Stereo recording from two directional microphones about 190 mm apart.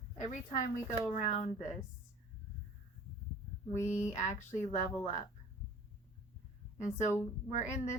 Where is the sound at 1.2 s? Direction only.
35° left (ahead or behind).